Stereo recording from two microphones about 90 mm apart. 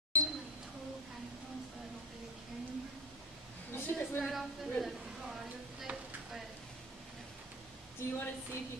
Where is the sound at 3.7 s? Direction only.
25° left (ahead or behind).